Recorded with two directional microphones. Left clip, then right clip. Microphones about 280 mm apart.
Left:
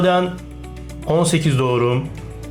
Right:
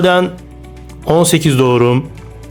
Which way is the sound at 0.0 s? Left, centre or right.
Right.